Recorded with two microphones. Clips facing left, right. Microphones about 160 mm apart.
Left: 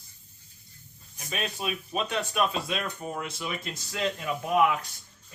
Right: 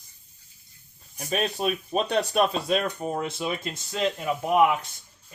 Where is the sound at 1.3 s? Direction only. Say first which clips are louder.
Right 6 dB; 40° right (ahead or behind).